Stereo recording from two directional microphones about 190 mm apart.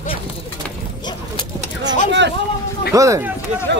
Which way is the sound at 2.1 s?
65° right (ahead or behind).